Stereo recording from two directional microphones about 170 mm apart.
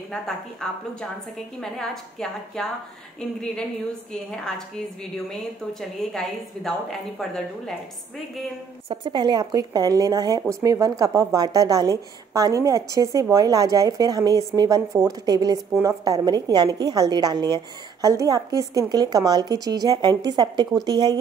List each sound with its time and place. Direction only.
1.6 s a woman's voice: 5° left (ahead or behind)
8.8 s speech: 30° right (ahead or behind)